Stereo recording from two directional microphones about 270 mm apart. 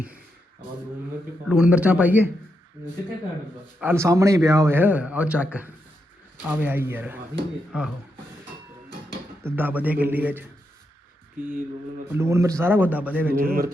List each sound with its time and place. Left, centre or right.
1.5 s a man's voice: centre
3.8 s a man's voice: centre
9.4 s speech: centre
11.4 s speech: right
12.0 s speech: centre